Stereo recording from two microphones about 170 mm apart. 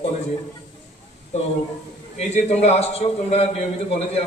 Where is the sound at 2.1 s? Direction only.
40° left (ahead or behind).